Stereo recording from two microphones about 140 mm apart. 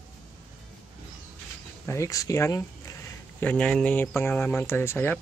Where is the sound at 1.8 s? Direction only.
20° left (ahead or behind).